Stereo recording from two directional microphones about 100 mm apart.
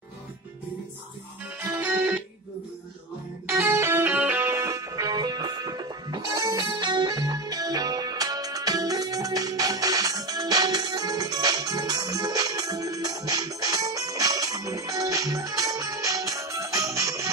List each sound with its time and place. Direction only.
1.6 s music: 25° right (ahead or behind)
3.4 s music: 30° right (ahead or behind)